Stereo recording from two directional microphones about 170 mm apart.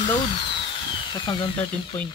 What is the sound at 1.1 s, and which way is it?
Speech, 25° left (ahead or behind).